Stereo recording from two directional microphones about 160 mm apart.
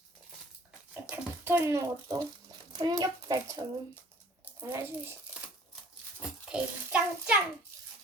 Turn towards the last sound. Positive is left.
turn(degrees=-10)  # may be behind; listen again after turning